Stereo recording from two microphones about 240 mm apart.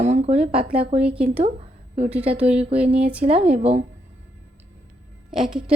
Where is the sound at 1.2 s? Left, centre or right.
Right.